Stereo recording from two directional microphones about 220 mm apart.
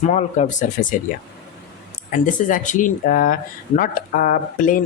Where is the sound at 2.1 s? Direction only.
35° left (ahead or behind).